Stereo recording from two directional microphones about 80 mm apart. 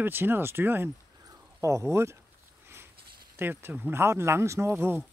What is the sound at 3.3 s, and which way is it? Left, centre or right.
Speech, right.